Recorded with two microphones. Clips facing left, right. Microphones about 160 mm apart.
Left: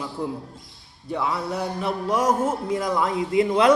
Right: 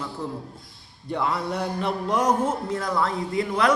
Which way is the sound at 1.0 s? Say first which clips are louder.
Even; centre (ahead or behind).